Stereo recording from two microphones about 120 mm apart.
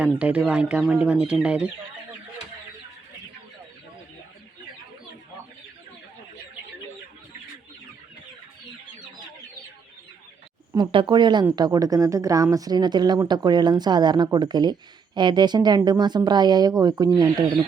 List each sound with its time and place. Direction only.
0.0 s speech: 10° right (ahead or behind)
10.8 s speech: 40° right (ahead or behind)